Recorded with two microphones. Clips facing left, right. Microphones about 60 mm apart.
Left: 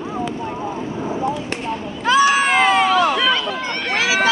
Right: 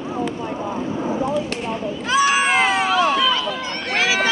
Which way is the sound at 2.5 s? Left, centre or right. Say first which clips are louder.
Left 3 dB; left.